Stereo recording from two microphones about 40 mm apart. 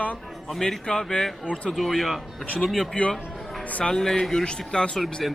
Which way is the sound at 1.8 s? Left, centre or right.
Centre.